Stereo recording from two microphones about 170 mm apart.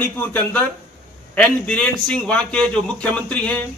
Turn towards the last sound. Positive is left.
turn(degrees=5)  # may be behind; listen again after turning